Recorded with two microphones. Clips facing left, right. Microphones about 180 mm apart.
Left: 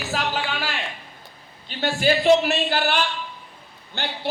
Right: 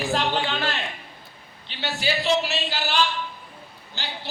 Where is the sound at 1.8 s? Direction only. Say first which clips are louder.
Left 6 dB; 50° left (ahead or behind).